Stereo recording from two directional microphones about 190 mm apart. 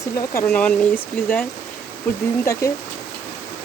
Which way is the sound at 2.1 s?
10° left (ahead or behind).